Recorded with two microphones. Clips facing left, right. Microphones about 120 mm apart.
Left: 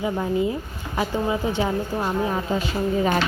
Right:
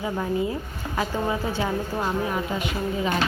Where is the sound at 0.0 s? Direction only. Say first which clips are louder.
Left 3 dB; 20° left (ahead or behind).